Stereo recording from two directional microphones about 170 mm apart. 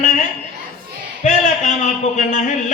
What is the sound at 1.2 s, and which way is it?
A man's voice, 45° left (ahead or behind).